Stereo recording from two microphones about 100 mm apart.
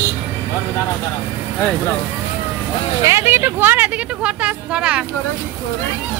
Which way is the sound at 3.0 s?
25° right (ahead or behind).